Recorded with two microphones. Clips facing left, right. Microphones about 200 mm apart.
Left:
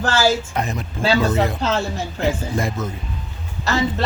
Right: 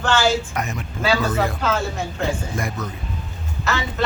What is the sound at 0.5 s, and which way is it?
Speech, 30° left (ahead or behind).